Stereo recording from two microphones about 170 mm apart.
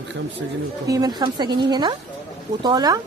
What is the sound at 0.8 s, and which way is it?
A woman's voice, 20° right (ahead or behind).